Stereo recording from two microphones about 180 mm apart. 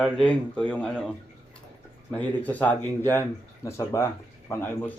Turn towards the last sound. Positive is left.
turn(degrees=10)  # may be behind; listen again after turning